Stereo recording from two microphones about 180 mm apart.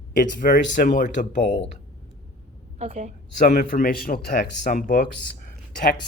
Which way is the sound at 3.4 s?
50° left (ahead or behind).